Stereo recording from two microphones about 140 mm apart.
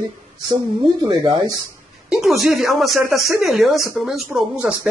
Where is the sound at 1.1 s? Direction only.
30° right (ahead or behind).